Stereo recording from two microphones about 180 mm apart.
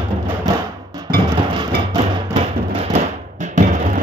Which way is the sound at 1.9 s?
30° right (ahead or behind).